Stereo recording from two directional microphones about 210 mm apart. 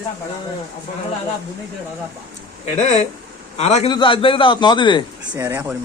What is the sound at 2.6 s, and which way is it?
A man's voice, 35° left (ahead or behind).